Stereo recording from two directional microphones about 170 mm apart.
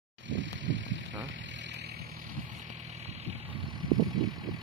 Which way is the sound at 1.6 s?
90° right.